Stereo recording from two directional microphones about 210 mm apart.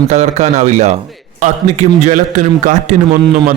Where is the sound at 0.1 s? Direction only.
30° right (ahead or behind).